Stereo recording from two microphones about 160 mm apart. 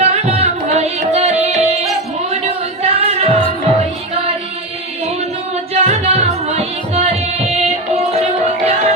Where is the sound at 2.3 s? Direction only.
40° right (ahead or behind).